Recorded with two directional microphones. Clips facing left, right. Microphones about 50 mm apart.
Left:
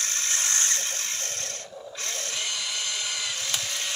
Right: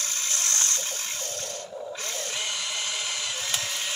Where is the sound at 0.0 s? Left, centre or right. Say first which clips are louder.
Left 2 dB; left.